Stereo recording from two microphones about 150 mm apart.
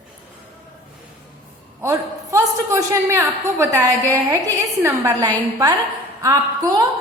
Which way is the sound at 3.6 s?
20° right (ahead or behind).